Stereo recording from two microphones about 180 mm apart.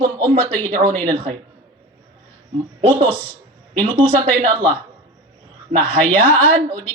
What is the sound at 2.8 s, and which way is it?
Speech, 30° right (ahead or behind).